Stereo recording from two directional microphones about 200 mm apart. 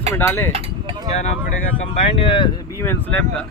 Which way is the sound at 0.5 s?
25° right (ahead or behind).